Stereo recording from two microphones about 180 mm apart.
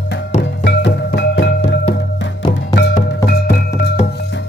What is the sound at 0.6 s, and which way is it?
Music, 75° left (ahead or behind).